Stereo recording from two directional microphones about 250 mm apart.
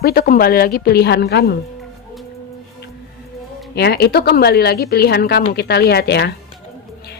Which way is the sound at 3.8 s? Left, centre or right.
Left.